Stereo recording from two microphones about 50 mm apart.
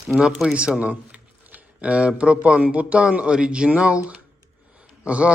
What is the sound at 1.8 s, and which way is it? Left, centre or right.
A man's voice, right.